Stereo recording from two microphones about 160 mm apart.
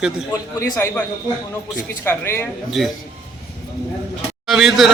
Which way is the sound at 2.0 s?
15° left (ahead or behind).